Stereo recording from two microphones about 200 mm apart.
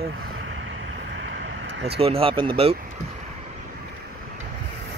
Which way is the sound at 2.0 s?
30° right (ahead or behind).